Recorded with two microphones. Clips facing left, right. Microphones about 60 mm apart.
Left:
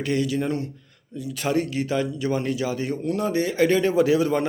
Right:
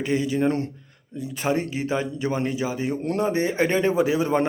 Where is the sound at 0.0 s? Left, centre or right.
Right.